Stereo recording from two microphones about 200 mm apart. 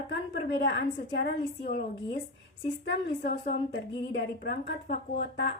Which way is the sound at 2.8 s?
60° left (ahead or behind).